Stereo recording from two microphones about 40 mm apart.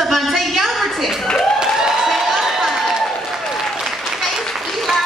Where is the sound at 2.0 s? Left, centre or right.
Centre.